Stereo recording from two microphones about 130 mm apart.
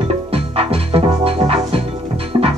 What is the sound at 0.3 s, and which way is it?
Music, 45° right (ahead or behind).